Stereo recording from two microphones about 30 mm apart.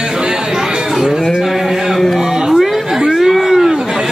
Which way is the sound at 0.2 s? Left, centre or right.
Right.